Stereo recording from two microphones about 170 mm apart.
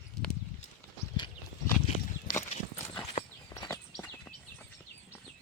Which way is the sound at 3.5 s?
20° left (ahead or behind).